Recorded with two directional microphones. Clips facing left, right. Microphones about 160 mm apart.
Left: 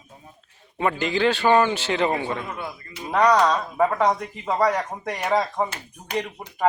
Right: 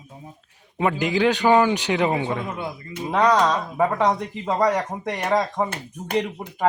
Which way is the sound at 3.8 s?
Centre (ahead or behind).